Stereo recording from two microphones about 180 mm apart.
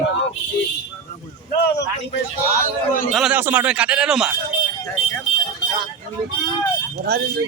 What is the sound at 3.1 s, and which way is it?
A man's voice, 5° right (ahead or behind).